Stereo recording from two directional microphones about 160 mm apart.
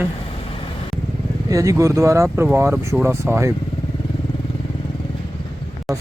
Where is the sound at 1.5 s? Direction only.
20° right (ahead or behind).